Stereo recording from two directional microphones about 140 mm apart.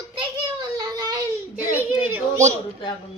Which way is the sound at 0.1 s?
30° right (ahead or behind).